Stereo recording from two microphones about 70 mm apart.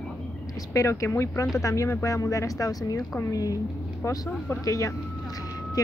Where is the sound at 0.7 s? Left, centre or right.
Left.